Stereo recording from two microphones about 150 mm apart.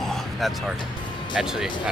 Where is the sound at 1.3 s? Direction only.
5° right (ahead or behind).